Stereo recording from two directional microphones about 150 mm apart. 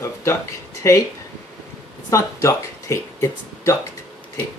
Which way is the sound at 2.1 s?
20° left (ahead or behind).